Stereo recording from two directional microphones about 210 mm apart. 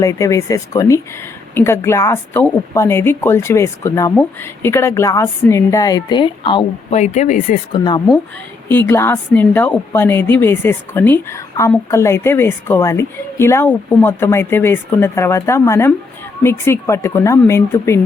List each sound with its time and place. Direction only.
0.0 s a woman's voice: 15° left (ahead or behind); by 7.6 s 40° left (ahead or behind)
7.7 s speech: 20° left (ahead or behind)
8.9 s a woman's voice: 10° left (ahead or behind)